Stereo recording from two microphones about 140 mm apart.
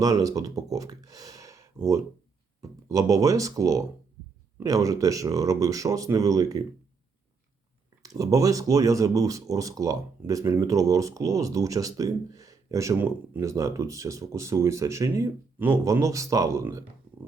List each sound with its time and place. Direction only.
0.0 s speech: 25° right (ahead or behind)
8.0 s speech: 25° right (ahead or behind)